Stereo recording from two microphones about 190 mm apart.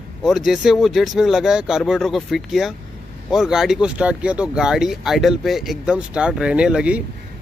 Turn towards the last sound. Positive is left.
turn(degrees=-5)  # may be behind; listen again after turning